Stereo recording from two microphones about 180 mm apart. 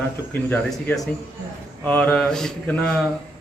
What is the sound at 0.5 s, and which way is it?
A man's voice, 10° left (ahead or behind).